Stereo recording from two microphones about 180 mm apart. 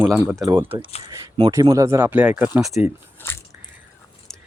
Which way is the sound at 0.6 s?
30° right (ahead or behind).